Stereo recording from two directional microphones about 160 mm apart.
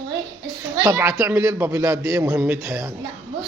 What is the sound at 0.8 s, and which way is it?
A man's voice, 20° right (ahead or behind).